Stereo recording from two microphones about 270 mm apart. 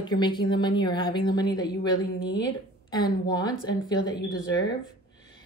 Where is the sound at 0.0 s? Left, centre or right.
Centre.